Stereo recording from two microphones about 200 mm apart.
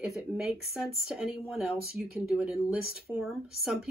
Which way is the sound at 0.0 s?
Centre (ahead or behind).